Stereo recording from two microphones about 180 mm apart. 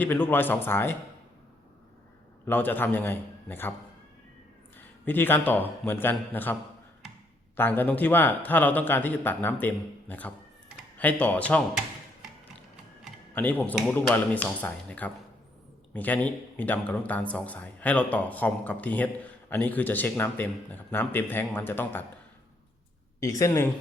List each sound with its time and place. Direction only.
0.0 s speech: 10° left (ahead or behind)
2.5 s speech: 10° left (ahead or behind)
5.0 s speech: 10° left (ahead or behind)
13.3 s speech: 10° left (ahead or behind)
23.2 s speech: 15° left (ahead or behind)